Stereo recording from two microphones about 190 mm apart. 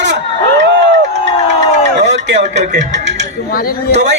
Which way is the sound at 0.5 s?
70° right (ahead or behind).